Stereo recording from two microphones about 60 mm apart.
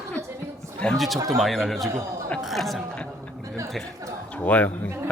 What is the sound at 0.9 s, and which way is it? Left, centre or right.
Speech, centre.